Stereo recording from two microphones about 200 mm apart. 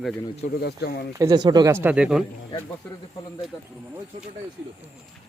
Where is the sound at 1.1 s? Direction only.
20° right (ahead or behind).